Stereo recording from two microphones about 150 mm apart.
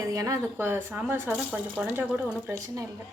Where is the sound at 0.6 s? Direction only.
10° right (ahead or behind).